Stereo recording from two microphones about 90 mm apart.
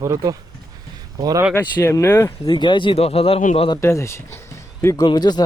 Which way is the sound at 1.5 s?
20° left (ahead or behind).